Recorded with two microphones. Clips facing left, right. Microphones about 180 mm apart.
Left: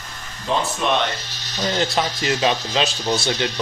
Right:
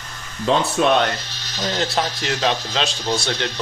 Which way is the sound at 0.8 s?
75° right (ahead or behind).